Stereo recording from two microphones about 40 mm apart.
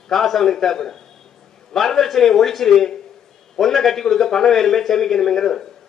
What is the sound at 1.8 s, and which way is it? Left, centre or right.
A man's voice, centre.